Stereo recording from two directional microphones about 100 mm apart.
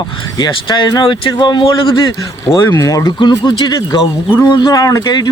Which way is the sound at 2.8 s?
35° left (ahead or behind).